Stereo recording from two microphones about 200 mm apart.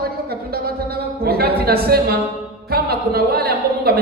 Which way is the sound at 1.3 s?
50° right (ahead or behind).